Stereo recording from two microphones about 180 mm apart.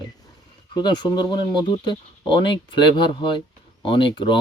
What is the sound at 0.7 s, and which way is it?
Speech, 25° left (ahead or behind).